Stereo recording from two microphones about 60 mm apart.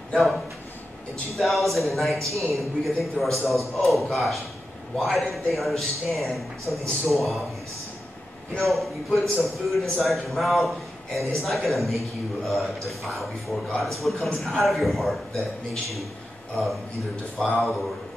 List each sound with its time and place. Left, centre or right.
0.1 s a man's voice: centre
8.5 s a man's voice: centre
17.5 s a man's voice: centre